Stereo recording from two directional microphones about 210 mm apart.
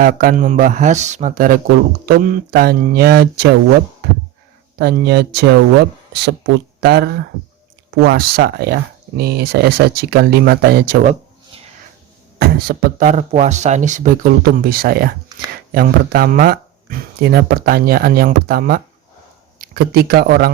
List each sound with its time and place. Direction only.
0.0 s speech: 45° right (ahead or behind)
4.8 s speech: 50° right (ahead or behind); by 11.6 s 35° right (ahead or behind)
12.4 s speech: 45° right (ahead or behind)